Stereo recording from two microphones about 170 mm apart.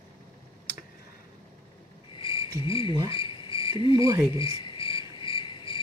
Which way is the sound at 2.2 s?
30° left (ahead or behind).